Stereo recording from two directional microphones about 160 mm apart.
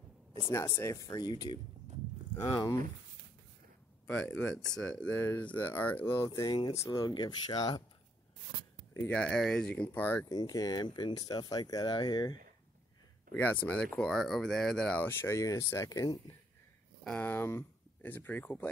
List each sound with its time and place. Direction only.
0.5 s speech: 15° left (ahead or behind)
4.1 s speech: 10° left (ahead or behind); by 7.8 s 25° left (ahead or behind)
8.9 s speech: 10° left (ahead or behind)
10.2 s speech: 25° left (ahead or behind)
13.3 s speech: 10° left (ahead or behind)
17.0 s speech: 10° left (ahead or behind)